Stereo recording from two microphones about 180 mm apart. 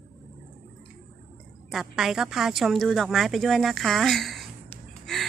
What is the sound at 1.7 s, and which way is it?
Speech, centre (ahead or behind).